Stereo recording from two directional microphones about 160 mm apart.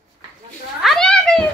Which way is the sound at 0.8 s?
5° left (ahead or behind).